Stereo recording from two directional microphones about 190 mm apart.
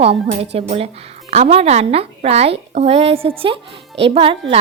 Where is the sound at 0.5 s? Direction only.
30° right (ahead or behind).